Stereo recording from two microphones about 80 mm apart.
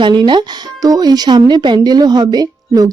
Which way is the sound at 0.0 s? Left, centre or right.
Right.